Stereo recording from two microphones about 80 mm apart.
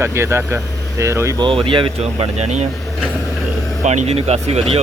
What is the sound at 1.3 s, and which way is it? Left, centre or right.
Speech, right.